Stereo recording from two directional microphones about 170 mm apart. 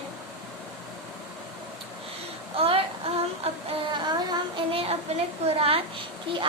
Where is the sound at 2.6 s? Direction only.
35° right (ahead or behind).